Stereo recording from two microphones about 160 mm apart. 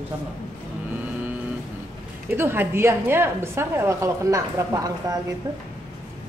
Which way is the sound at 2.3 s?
15° right (ahead or behind).